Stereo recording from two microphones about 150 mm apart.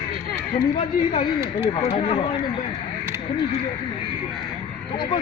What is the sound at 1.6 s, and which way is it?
Speech, 40° left (ahead or behind).